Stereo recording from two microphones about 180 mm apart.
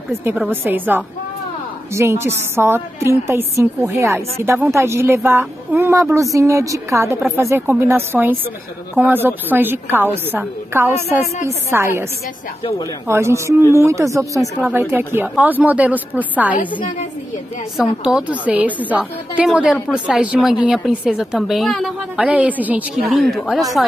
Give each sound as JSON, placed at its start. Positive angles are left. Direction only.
{"t": 0.2, "sound": "a woman's voice", "side_deg": -10}
{"t": 13.1, "sound": "a woman's voice", "side_deg": -15}
{"t": 17.7, "sound": "a woman's voice", "side_deg": -5}